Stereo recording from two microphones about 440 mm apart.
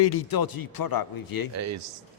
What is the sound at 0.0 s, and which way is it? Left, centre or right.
A man's voice, left.